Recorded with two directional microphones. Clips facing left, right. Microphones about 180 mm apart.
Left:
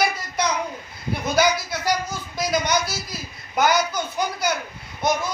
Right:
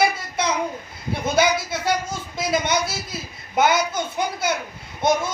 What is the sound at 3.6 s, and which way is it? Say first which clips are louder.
Speech: right 1 dB; 25° right (ahead or behind).